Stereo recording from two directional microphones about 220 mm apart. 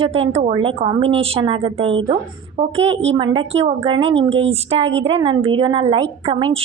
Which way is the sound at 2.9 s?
60° right (ahead or behind).